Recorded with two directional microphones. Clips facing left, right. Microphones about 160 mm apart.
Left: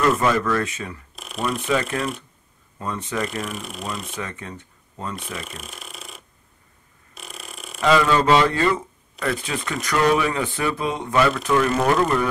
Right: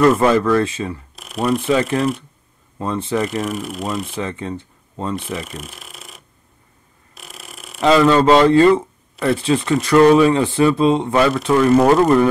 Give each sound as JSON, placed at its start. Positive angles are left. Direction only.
{"t": 0.1, "sound": "speech", "side_deg": -30}
{"t": 1.1, "sound": "a sound", "side_deg": 0}
{"t": 1.6, "sound": "speech", "side_deg": -30}
{"t": 3.4, "sound": "speech", "side_deg": 0}
{"t": 4.1, "sound": "speech", "side_deg": -30}
{"t": 5.4, "sound": "a sound", "side_deg": 0}
{"t": 7.8, "sound": "speech", "side_deg": -30}